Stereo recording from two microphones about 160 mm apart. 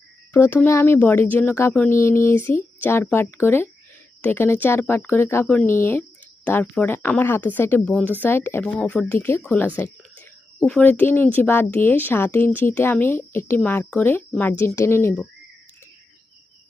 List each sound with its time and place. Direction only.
0.3 s speech: 15° left (ahead or behind)